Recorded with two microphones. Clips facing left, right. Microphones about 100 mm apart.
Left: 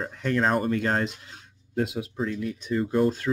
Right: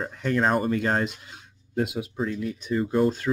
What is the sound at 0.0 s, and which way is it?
Speech, 10° right (ahead or behind).